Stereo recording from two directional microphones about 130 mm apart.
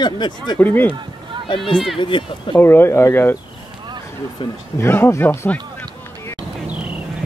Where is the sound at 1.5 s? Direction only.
40° left (ahead or behind).